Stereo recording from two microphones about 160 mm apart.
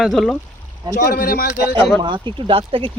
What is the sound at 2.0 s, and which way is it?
Speech, 30° right (ahead or behind).